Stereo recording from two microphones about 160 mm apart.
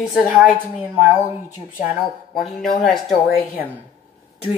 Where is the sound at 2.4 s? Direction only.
Centre (ahead or behind).